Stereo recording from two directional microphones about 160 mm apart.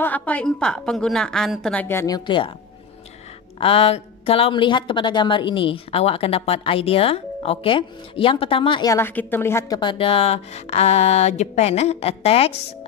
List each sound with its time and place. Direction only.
0.0 s a woman's voice: 10° left (ahead or behind); by 2.5 s 30° left (ahead or behind)
3.5 s speech: 35° left (ahead or behind)
8.9 s a woman's voice: 10° left (ahead or behind)
9.8 s speech: 30° left (ahead or behind)